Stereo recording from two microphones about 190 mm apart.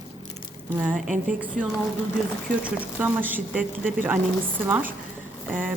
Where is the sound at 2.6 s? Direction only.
10° right (ahead or behind).